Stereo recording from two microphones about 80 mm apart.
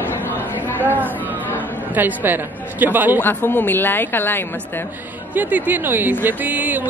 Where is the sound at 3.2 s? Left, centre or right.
Left.